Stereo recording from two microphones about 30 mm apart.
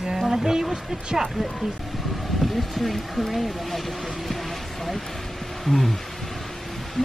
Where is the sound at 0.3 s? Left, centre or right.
Centre.